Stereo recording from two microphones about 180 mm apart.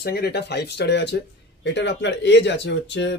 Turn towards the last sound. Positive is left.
turn(degrees=80)